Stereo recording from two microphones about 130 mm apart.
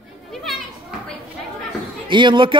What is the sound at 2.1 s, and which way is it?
Speech, 35° right (ahead or behind).